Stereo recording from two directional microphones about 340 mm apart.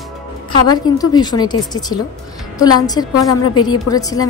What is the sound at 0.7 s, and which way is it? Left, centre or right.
A woman's voice, centre.